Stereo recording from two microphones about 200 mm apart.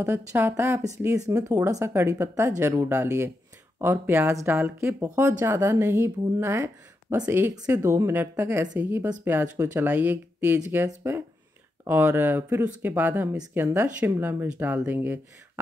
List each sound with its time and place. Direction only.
0.3 s speech: 10° right (ahead or behind)